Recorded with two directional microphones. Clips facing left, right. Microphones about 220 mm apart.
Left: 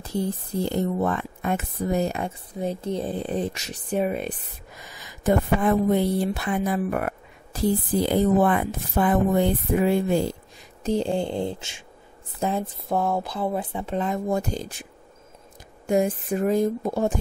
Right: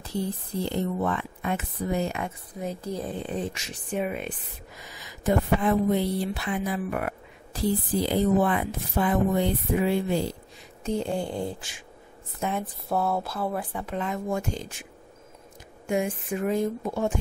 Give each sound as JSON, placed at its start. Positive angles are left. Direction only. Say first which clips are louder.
{"t": 0.0, "sound": "speech", "louder": "left 3 dB", "side_deg": 45}
{"t": 4.8, "sound": "speech", "louder": "left 3 dB", "side_deg": 50}
{"t": 11.0, "sound": "speech", "louder": "left 3 dB", "side_deg": 30}
{"t": 12.6, "sound": "speech", "louder": "left 2 dB", "side_deg": 15}
{"t": 13.9, "sound": "speech", "louder": "left 4 dB", "side_deg": 35}
{"t": 15.9, "sound": "speech", "louder": "left 5 dB", "side_deg": 35}